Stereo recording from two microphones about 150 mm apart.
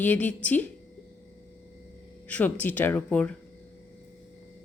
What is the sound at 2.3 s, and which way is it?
Speech, 10° left (ahead or behind).